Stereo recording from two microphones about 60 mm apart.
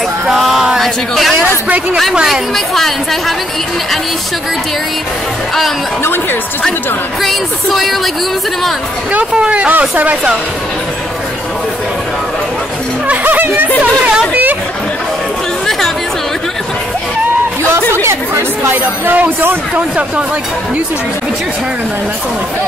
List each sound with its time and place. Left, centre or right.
0.3 s a sound: centre
0.7 s a woman's voice: centre
7.2 s a woman's voice: centre
9.1 s speech: centre
13.1 s speech: right
14.3 s chatter: right
18.0 s chatter: right
18.7 s speech: right